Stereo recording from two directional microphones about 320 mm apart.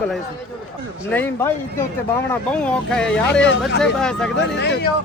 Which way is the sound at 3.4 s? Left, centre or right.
Left.